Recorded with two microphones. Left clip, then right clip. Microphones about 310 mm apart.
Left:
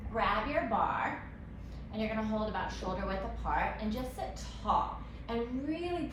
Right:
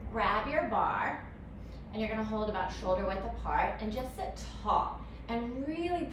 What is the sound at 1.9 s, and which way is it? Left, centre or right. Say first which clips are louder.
A woman's voice: even; centre.